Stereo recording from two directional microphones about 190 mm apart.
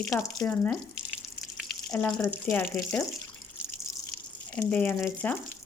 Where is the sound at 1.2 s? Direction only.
Centre (ahead or behind).